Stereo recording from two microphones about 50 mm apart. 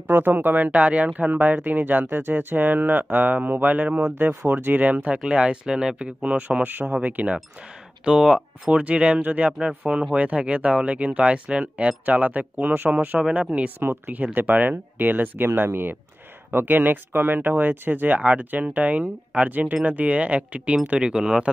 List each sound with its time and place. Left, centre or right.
0.1 s speech: right
0.7 s speech: right
4.5 s speech: right
8.0 s speech: centre
9.5 s speech: centre; by 12.9 s right
13.3 s speech: right
14.0 s speech: right
21.0 s speech: centre